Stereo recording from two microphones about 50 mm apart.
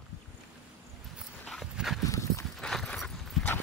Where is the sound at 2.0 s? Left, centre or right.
Left.